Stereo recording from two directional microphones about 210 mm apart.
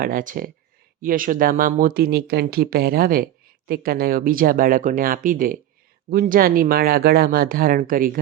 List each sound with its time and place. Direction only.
0.0 s speech: 40° right (ahead or behind)